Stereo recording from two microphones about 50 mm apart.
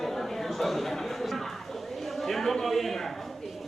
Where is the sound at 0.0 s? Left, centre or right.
Centre.